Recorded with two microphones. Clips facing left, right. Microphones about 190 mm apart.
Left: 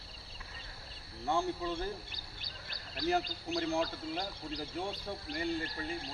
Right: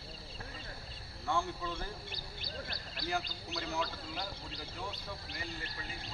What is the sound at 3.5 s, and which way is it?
Speech, 45° left (ahead or behind).